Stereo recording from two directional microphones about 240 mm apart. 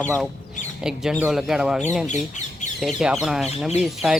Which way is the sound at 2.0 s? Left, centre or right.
Left.